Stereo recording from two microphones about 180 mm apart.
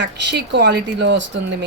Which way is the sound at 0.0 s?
70° right (ahead or behind).